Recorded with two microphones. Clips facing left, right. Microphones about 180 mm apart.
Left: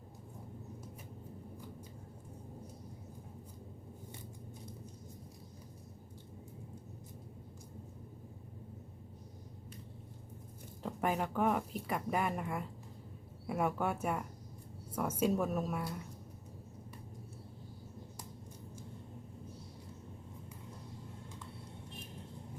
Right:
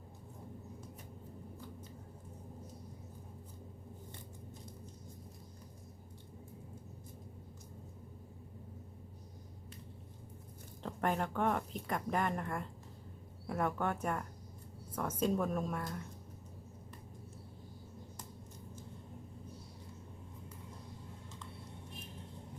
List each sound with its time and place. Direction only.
10.8 s a woman's voice: 5° left (ahead or behind)